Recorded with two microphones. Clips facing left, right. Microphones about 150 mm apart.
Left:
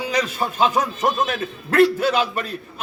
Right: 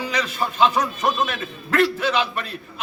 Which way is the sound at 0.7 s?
5° left (ahead or behind).